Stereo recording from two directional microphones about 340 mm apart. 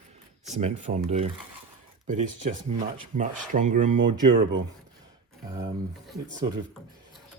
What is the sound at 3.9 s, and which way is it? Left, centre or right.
Speech, right.